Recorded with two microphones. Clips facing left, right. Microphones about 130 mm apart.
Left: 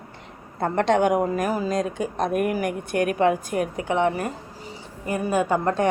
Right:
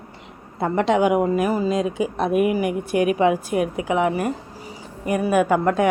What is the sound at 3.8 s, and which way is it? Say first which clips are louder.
Speech: left 1 dB; 30° left (ahead or behind).